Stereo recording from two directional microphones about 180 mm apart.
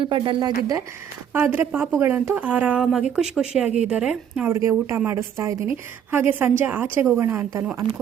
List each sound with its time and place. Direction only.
0.0 s speech: 25° right (ahead or behind)
1.3 s a woman's voice: 10° right (ahead or behind)